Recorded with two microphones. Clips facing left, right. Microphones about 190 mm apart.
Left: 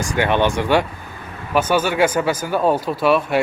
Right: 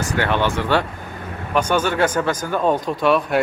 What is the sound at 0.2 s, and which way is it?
Speech, 15° left (ahead or behind).